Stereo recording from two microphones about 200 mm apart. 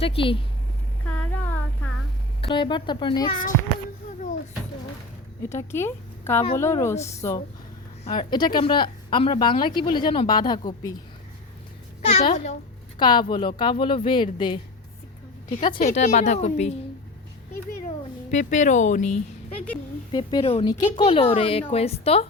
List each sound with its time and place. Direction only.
0.0 s speech: 25° left (ahead or behind)
1.0 s child singing: 5° left (ahead or behind)
2.4 s speech: 25° left (ahead or behind)
5.5 s a woman's voice: 10° left (ahead or behind)
12.0 s speech: 30° left (ahead or behind)
13.0 s speech: 25° left (ahead or behind)
15.9 s speech: 35° left (ahead or behind)
17.8 s cat: 35° left (ahead or behind)
20.1 s speech: 25° left (ahead or behind)